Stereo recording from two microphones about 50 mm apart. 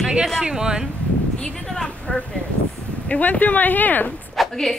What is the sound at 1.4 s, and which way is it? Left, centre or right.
Speech, centre.